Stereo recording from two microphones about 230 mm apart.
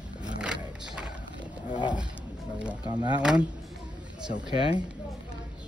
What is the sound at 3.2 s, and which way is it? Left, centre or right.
Speech, centre.